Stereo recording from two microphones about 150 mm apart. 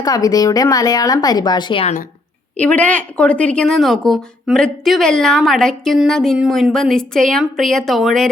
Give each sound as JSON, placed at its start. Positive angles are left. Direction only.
{"t": 0.0, "sound": "speech", "side_deg": 25}
{"t": 2.6, "sound": "a woman's voice", "side_deg": 10}